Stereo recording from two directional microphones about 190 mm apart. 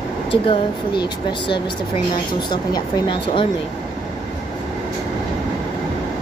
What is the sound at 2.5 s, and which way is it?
Speech, 25° left (ahead or behind).